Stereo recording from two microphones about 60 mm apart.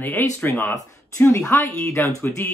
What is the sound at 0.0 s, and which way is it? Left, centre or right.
Speech, left.